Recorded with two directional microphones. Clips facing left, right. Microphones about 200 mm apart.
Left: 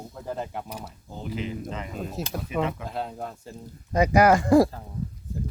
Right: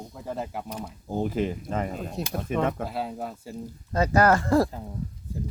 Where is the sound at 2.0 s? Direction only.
Centre (ahead or behind).